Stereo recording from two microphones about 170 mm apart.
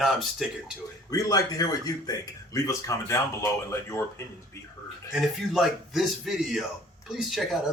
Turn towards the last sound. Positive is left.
turn(degrees=0)  # may be behind; listen again after turning